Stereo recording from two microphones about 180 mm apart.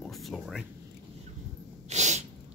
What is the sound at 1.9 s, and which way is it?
Sneeze, 40° right (ahead or behind).